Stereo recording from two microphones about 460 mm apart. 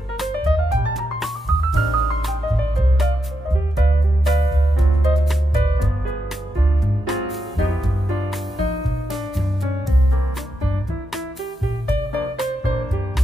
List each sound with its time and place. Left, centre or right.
0.2 s music: centre
4.3 s music: centre
7.1 s music: centre